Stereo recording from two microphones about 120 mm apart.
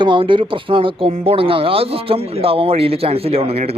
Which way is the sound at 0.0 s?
45° right (ahead or behind).